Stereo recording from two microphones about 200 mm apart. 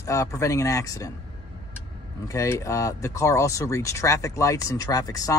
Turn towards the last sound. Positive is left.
turn(degrees=20)  # may be behind; listen again after turning